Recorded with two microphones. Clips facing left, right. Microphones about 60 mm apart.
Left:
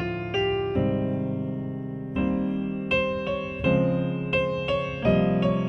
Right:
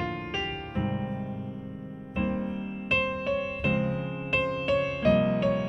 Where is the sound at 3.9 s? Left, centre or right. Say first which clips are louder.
Left 6 dB; centre.